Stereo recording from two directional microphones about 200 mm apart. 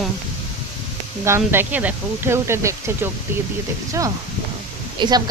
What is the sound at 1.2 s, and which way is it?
Speech, 10° right (ahead or behind).